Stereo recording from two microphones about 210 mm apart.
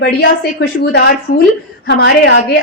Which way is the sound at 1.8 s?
55° left (ahead or behind).